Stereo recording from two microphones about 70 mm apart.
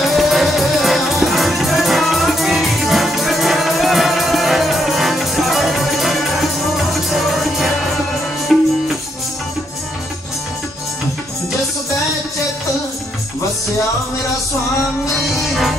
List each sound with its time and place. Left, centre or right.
0.0 s music: centre
15.0 s music: centre